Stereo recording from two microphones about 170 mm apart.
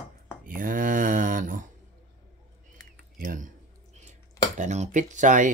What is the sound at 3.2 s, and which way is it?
Speech, 50° right (ahead or behind).